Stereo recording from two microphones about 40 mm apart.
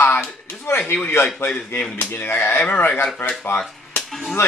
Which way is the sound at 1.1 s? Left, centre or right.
Left.